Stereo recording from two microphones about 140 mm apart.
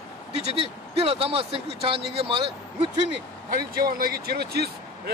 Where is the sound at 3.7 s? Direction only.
90° right.